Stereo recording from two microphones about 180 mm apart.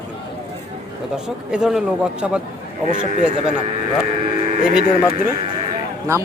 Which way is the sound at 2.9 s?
45° right (ahead or behind).